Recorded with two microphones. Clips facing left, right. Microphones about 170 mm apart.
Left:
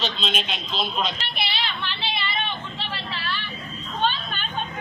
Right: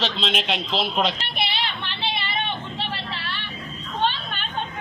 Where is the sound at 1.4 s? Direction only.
55° right (ahead or behind).